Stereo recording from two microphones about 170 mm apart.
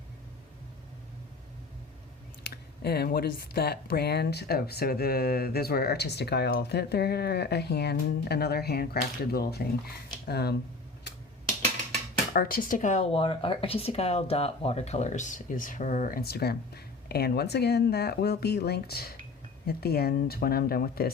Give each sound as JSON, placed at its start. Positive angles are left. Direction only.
{"t": 2.8, "sound": "speech", "side_deg": 70}
{"t": 12.3, "sound": "speech", "side_deg": 55}